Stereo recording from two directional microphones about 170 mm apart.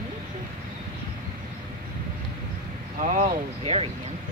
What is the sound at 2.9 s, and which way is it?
Speech, 45° right (ahead or behind).